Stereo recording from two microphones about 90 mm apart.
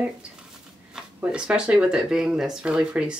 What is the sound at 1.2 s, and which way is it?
Speech, 10° right (ahead or behind).